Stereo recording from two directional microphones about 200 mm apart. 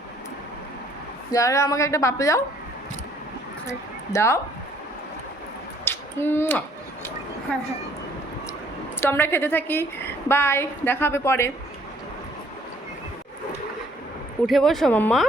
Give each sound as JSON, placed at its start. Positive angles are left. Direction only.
{"t": 1.3, "sound": "a woman's voice", "side_deg": 15}
{"t": 3.7, "sound": "speech", "side_deg": 15}
{"t": 5.8, "sound": "a sound", "side_deg": 10}
{"t": 7.5, "sound": "speech", "side_deg": 5}
{"t": 9.0, "sound": "a woman's voice", "side_deg": 10}
{"t": 14.4, "sound": "speech", "side_deg": 0}